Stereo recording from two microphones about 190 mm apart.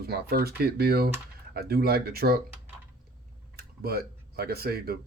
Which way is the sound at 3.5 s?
55° right (ahead or behind).